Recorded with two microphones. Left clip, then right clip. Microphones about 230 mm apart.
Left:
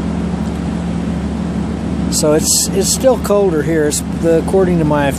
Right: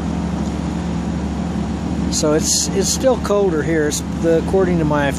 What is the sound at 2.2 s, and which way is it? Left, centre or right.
Speech, centre.